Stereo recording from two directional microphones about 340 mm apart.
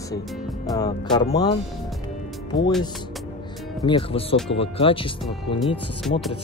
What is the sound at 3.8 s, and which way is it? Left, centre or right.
Speech, centre.